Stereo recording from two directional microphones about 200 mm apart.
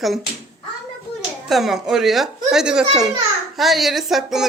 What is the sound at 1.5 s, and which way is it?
A woman's voice, centre (ahead or behind).